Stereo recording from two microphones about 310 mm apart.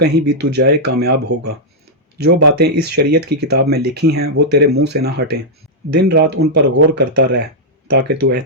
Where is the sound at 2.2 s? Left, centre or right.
Right.